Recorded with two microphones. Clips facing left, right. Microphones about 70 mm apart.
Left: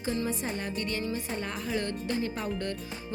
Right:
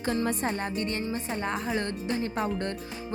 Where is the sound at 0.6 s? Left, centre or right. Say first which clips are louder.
Right 2 dB; right.